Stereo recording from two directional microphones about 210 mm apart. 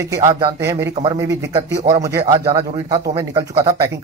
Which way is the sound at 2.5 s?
20° right (ahead or behind).